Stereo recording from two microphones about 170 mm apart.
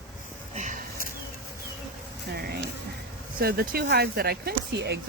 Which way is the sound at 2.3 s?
65° right (ahead or behind).